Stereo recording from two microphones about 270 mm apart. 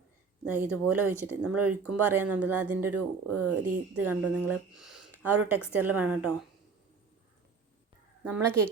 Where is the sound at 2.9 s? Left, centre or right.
Right.